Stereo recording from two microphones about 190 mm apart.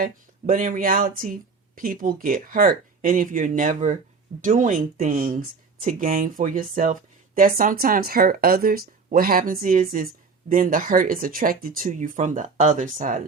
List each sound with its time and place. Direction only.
0.0 s speech: 45° right (ahead or behind)